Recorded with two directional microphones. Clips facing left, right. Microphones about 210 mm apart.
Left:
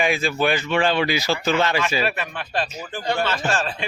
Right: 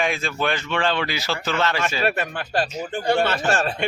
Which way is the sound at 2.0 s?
45° right (ahead or behind).